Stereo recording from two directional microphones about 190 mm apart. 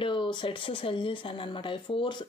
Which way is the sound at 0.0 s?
25° left (ahead or behind).